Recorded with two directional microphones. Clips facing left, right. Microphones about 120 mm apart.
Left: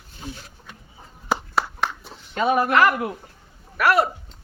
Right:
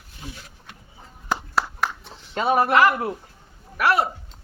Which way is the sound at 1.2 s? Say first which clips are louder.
Left 1 dB; centre (ahead or behind).